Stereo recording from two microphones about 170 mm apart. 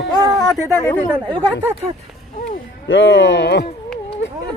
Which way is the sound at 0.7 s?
15° left (ahead or behind).